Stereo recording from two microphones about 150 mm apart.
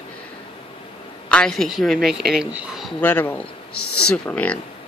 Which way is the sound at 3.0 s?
10° left (ahead or behind).